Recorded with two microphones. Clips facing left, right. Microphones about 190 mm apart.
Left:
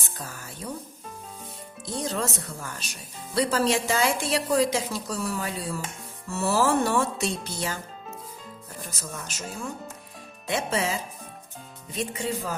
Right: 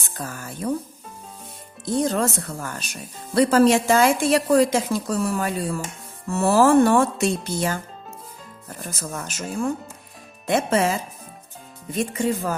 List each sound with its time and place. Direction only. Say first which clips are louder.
0.2 s speech: right 9 dB; 50° right (ahead or behind)
1.8 s speech: right 8 dB; 50° right (ahead or behind)
8.9 s speech: right 8 dB; 55° right (ahead or behind)
11.9 s speech: right 6 dB; 50° right (ahead or behind)